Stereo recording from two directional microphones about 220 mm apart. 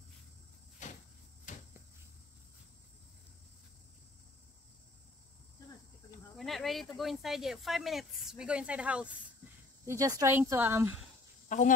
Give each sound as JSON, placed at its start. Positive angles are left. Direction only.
{"t": 0.8, "sound": "cricket", "side_deg": 35}
{"t": 1.5, "sound": "a sound", "side_deg": 35}
{"t": 6.3, "sound": "speech", "side_deg": 0}
{"t": 11.4, "sound": "speech", "side_deg": 35}